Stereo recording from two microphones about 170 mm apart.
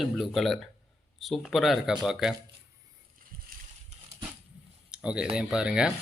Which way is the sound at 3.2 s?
55° right (ahead or behind).